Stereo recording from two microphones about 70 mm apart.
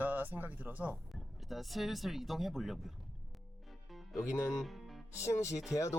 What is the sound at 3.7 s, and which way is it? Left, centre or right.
Music, centre.